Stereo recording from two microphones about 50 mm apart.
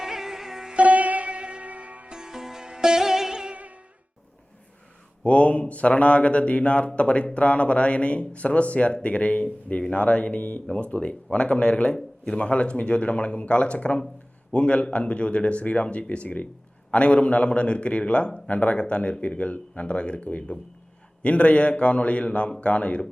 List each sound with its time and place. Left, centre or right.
0.0 s music: centre
0.7 s sitar: right
2.0 s sitar: centre
3.5 s music: right
5.2 s a man's voice: left